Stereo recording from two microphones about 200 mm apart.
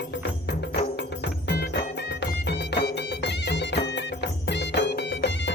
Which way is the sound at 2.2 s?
55° left (ahead or behind).